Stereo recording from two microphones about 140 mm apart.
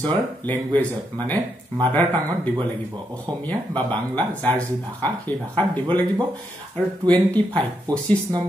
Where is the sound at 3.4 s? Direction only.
10° left (ahead or behind).